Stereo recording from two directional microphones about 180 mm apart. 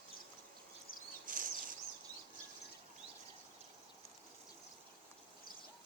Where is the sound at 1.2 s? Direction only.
50° right (ahead or behind).